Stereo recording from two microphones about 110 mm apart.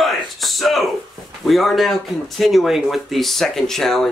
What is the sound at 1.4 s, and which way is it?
Speech, centre (ahead or behind).